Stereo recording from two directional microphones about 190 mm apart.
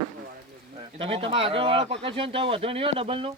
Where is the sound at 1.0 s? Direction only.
30° right (ahead or behind).